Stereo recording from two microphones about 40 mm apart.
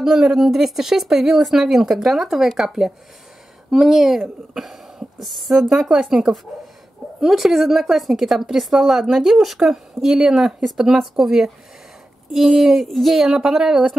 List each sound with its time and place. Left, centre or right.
0.0 s a woman's voice: centre
5.6 s a woman's voice: centre
13.3 s a woman's voice: centre